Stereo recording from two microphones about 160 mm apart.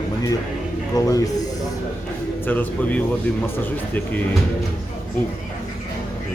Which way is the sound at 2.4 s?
10° left (ahead or behind).